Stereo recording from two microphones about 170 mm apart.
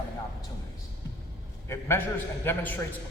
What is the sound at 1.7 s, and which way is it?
A man's voice, 15° left (ahead or behind).